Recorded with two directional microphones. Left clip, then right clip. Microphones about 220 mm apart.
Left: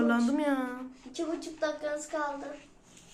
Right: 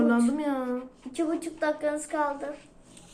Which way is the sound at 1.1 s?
50° right (ahead or behind).